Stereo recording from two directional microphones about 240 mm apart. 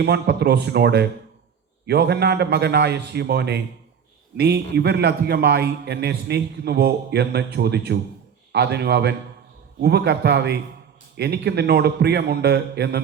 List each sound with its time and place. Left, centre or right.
0.0 s a man's voice: right